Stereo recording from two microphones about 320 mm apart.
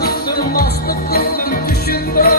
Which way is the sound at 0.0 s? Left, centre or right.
Left.